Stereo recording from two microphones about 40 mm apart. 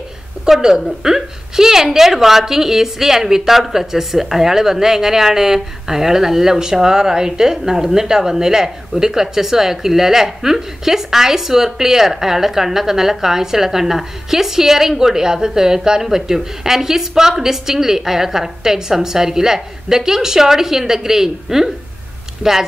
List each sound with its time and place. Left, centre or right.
0.6 s a woman's voice: centre